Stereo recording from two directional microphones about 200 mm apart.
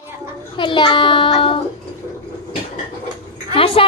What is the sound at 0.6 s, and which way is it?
A child's voice, 25° left (ahead or behind).